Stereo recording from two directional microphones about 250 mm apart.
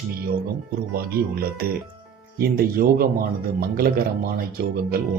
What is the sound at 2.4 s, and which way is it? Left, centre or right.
Speech, right.